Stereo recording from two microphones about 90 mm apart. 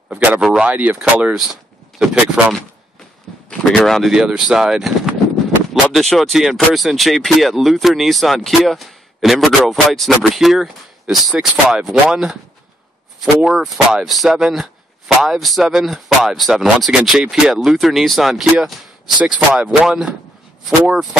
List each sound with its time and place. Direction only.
0.1 s speech: 15° right (ahead or behind)
1.3 s speech: 5° right (ahead or behind)
3.4 s speech: 5° left (ahead or behind)
19.5 s speech: 15° right (ahead or behind)